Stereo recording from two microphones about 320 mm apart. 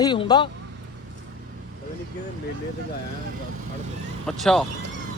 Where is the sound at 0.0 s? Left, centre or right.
Centre.